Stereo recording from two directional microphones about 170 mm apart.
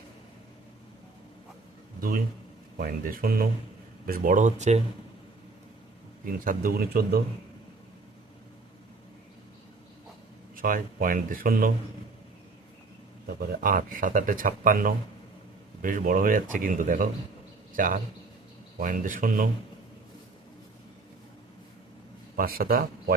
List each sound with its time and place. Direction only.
2.0 s a man's voice: 60° right (ahead or behind)
6.3 s speech: 55° right (ahead or behind)
10.5 s speech: 55° right (ahead or behind)
13.2 s speech: 55° right (ahead or behind)
22.4 s speech: 60° right (ahead or behind)